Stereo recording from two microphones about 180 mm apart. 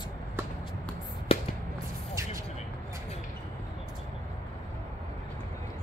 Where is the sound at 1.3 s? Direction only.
30° left (ahead or behind).